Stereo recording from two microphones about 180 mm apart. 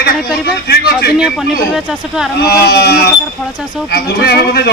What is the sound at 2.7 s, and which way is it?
A man's voice, 65° left (ahead or behind).